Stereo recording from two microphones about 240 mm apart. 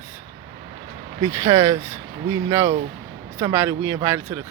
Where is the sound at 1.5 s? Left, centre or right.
Right.